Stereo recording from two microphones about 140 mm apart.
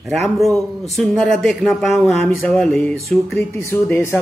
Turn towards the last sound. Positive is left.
turn(degrees=15)  # may be behind; listen again after turning